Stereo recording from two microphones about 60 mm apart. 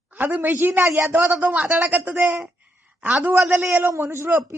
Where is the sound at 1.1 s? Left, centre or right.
Right.